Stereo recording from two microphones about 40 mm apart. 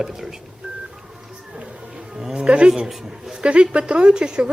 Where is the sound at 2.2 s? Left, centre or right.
Centre.